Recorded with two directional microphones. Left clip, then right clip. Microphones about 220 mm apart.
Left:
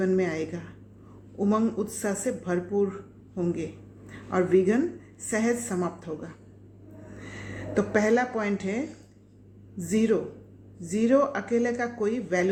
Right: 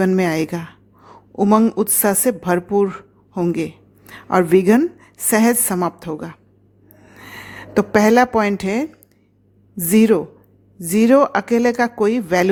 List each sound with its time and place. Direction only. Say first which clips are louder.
0.0 s a woman's voice: right 8 dB; 50° right (ahead or behind)